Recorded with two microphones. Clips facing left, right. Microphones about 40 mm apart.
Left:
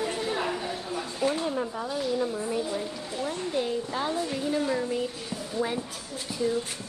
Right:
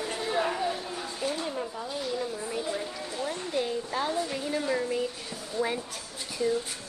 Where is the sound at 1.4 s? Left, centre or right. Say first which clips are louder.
Left 4 dB; centre.